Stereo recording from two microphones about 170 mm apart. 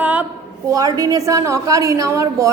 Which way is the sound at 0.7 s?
20° right (ahead or behind).